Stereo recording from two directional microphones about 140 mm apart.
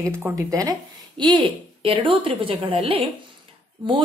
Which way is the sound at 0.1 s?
20° right (ahead or behind).